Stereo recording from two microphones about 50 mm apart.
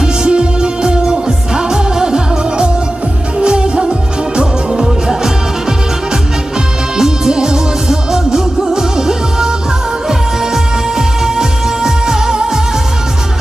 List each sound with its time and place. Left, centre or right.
0.0 s music: centre
6.9 s music: centre